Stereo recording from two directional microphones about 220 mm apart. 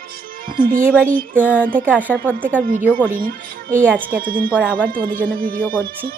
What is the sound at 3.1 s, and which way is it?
Speech, 40° right (ahead or behind).